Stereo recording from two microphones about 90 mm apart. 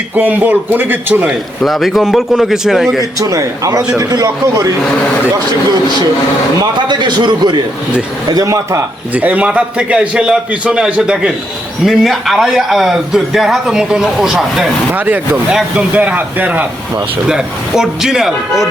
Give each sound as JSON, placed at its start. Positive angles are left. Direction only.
{"t": 0.2, "sound": "a man's voice", "side_deg": -20}
{"t": 1.3, "sound": "a man's voice", "side_deg": 0}
{"t": 3.2, "sound": "a man's voice", "side_deg": -40}
{"t": 6.6, "sound": "a man's voice", "side_deg": -55}
{"t": 8.3, "sound": "a man's voice", "side_deg": -40}
{"t": 9.1, "sound": "a man's voice", "side_deg": -15}
{"t": 14.9, "sound": "a man's voice", "side_deg": -20}
{"t": 17.2, "sound": "a man's voice", "side_deg": -5}